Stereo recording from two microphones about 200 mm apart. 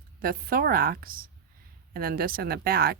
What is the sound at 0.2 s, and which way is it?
Speech, 45° right (ahead or behind).